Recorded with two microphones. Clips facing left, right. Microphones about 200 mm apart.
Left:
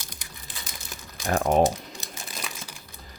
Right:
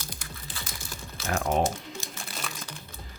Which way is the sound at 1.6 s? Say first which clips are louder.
Left 5 dB; 15° left (ahead or behind).